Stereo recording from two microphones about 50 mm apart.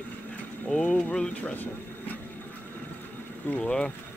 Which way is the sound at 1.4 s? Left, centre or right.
Left.